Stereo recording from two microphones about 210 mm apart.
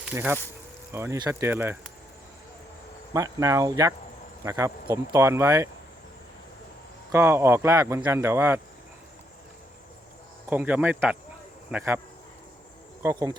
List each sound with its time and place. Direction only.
0.0 s speech: 10° right (ahead or behind)
3.1 s speech: 15° right (ahead or behind)
7.1 s speech: 10° right (ahead or behind)
10.4 s speech: 10° right (ahead or behind)
13.0 s speech: 15° right (ahead or behind)